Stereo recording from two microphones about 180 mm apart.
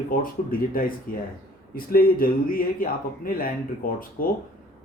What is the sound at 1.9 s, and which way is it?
Speech, 55° left (ahead or behind).